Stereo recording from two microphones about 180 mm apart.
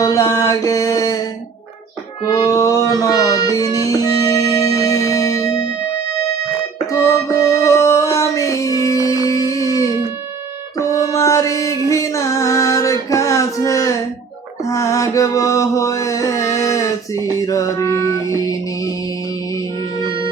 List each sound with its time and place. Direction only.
0.0 s mantra: 20° left (ahead or behind)
2.2 s music: 20° left (ahead or behind)
6.9 s music: 15° left (ahead or behind)